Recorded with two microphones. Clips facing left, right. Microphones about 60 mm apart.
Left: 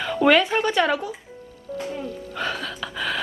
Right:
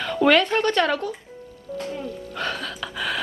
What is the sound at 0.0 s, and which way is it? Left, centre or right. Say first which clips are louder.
A child's voice: even; centre.